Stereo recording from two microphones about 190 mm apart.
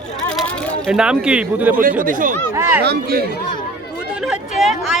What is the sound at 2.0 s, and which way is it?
Speech, 45° right (ahead or behind).